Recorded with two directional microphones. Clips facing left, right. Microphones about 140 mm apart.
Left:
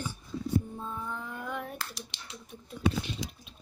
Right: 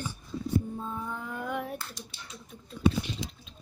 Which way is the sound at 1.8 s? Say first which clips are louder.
Left 1 dB; 80° left.